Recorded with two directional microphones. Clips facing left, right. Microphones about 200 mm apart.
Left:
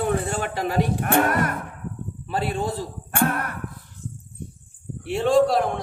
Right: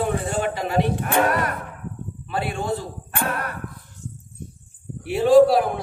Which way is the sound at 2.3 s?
35° left (ahead or behind).